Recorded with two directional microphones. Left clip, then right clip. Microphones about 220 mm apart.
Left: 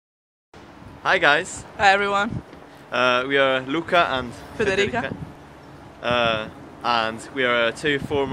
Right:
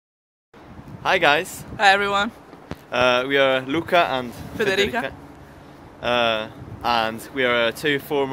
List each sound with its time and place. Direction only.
1.0 s speech: 10° right (ahead or behind)
1.8 s speech: 5° left (ahead or behind)
2.9 s speech: 15° right (ahead or behind)
4.6 s speech: 5° left (ahead or behind)
5.9 s speech: 15° right (ahead or behind)